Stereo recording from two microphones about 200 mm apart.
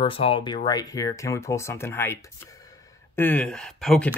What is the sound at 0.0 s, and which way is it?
Speech, 25° left (ahead or behind).